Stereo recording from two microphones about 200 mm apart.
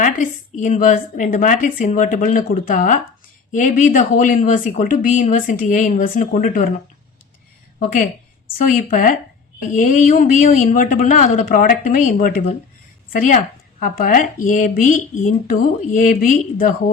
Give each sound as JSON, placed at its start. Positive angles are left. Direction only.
{"t": 0.0, "sound": "speech", "side_deg": 40}
{"t": 8.5, "sound": "speech", "side_deg": 40}